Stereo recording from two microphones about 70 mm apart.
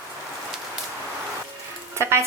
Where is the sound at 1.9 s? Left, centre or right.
Right.